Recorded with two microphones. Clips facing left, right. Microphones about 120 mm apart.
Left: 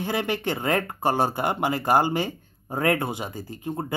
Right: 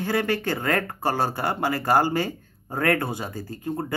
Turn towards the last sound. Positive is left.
turn(degrees=20)  # may be behind; listen again after turning